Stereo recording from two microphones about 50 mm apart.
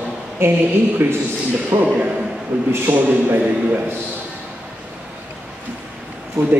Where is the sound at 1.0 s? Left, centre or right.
Right.